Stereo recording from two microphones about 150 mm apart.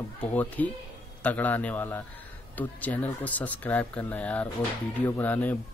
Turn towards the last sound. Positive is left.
turn(degrees=10)  # may be behind; listen again after turning